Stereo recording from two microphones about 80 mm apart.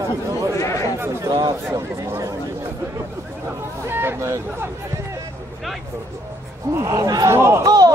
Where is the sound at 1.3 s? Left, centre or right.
Right.